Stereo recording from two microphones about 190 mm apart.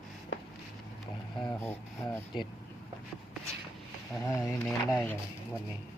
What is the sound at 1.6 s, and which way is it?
Speech, 10° left (ahead or behind).